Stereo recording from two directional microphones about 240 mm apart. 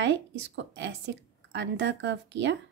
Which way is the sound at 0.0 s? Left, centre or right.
Right.